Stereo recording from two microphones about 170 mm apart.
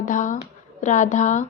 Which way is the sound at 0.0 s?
50° left (ahead or behind).